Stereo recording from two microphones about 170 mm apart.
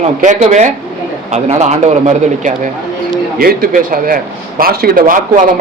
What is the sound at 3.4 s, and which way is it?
Speech, 60° right (ahead or behind).